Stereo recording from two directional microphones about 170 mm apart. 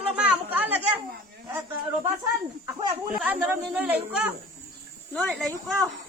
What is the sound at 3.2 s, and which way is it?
Speech, 10° right (ahead or behind).